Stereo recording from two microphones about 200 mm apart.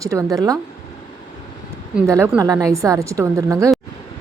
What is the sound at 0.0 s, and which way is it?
Speech, 15° right (ahead or behind).